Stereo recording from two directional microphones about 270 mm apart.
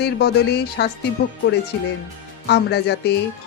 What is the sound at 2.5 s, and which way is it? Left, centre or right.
Speech, left.